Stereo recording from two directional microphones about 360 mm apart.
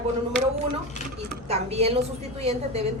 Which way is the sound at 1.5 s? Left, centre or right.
Centre.